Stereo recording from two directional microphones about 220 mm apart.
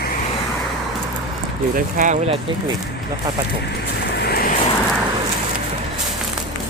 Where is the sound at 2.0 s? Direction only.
35° right (ahead or behind).